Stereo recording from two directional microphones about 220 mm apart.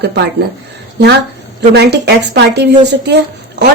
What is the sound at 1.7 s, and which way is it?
A woman's voice, 50° right (ahead or behind).